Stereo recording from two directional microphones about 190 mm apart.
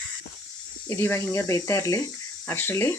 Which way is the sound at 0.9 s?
15° left (ahead or behind).